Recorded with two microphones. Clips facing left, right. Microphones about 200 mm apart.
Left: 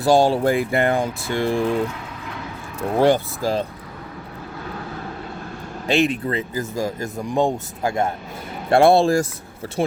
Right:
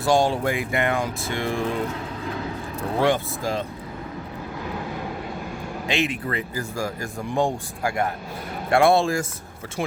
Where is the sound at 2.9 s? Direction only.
35° left (ahead or behind).